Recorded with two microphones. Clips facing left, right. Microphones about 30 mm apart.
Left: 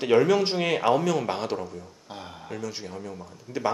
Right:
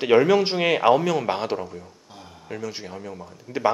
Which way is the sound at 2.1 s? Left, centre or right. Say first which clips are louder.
Left 5 dB; left.